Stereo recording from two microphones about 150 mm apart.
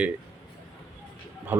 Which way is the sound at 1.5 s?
15° right (ahead or behind).